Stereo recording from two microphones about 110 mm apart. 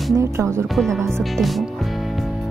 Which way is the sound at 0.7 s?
5° left (ahead or behind).